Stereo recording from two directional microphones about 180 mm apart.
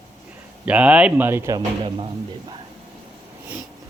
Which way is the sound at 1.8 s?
30° right (ahead or behind).